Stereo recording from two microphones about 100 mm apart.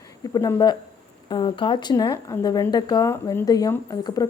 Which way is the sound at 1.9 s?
40° left (ahead or behind).